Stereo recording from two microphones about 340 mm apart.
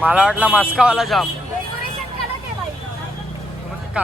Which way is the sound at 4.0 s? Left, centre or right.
Centre.